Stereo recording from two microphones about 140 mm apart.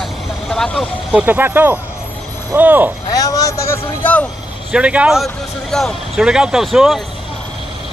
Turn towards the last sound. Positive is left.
turn(degrees=0)  # may be behind; listen again after turning